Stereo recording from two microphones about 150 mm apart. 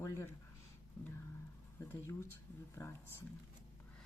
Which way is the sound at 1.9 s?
20° left (ahead or behind).